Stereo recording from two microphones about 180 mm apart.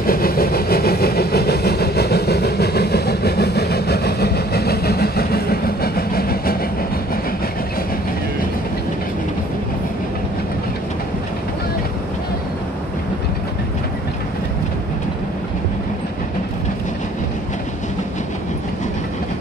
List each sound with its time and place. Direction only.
0.0 s vehicle: 55° left (ahead or behind)